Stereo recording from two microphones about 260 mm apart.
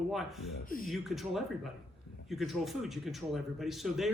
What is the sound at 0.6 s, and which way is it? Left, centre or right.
Speech, left.